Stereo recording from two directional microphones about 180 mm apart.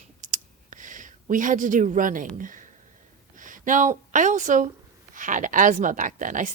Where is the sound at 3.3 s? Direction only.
45° right (ahead or behind).